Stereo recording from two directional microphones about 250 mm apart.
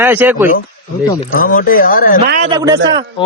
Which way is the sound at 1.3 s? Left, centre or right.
Left.